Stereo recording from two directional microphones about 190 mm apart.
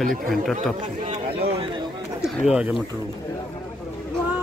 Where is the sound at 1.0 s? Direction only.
35° right (ahead or behind).